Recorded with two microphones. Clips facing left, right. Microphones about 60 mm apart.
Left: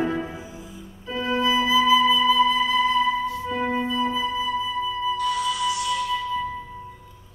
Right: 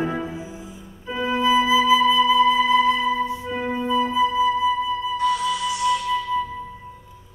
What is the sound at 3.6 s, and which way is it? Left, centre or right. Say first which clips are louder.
Music: right 3 dB; centre.